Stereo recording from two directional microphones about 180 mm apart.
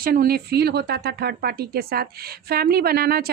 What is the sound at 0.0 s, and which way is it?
Speech, 55° right (ahead or behind).